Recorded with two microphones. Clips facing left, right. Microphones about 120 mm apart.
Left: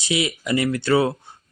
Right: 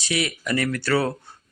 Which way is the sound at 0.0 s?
20° left (ahead or behind).